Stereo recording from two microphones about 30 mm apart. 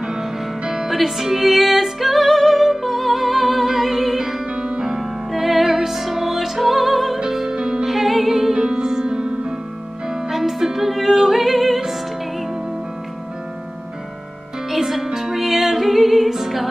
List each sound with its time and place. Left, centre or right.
0.8 s music: centre
4.6 s music: right
4.8 s music: centre
7.2 s music: centre
7.9 s music: centre
8.5 s music: centre
10.3 s music: centre
14.7 s music: centre